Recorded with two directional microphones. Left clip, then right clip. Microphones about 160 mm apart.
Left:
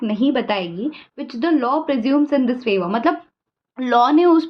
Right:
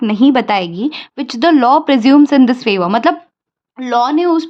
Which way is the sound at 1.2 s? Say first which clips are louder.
Right 9 dB; 60° right (ahead or behind).